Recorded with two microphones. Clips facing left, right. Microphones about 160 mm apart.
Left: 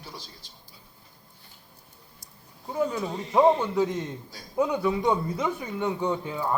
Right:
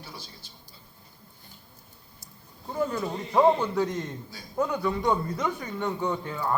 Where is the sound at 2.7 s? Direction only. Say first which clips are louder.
Left 1 dB; 10° left (ahead or behind).